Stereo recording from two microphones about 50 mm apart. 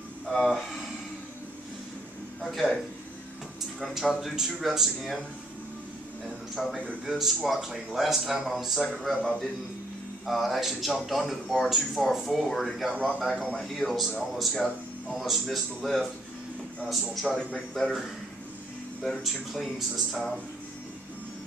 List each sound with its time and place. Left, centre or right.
0.4 s speech: centre
2.4 s speech: centre
3.8 s speech: centre
6.5 s a man's voice: centre
8.9 s speech: centre
12.9 s a man's voice: right
13.7 s speech: centre
17.1 s speech: centre
19.0 s speech: centre